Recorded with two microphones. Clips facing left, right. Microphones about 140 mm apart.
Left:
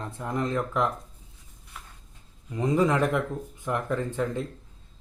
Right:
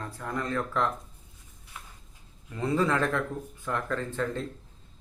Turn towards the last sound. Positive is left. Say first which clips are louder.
# left 3 dB
turn(degrees=15)  # may be behind; listen again after turning